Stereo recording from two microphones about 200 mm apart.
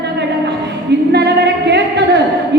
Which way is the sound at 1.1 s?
55° right (ahead or behind).